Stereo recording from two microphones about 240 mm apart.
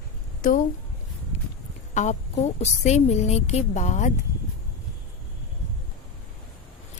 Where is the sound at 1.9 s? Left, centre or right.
Left.